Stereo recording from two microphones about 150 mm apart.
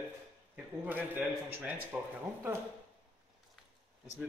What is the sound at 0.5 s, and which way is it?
A man's voice, 10° right (ahead or behind).